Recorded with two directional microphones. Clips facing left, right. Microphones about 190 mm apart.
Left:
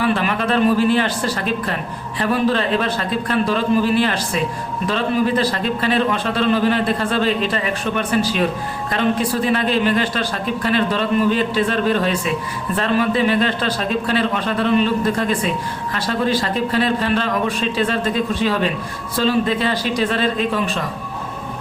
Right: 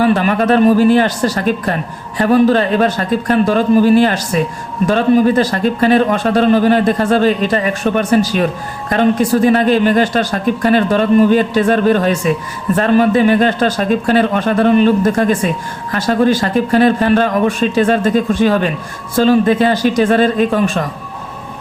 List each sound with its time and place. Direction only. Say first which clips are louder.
0.0 s speech: right 7 dB; 45° right (ahead or behind)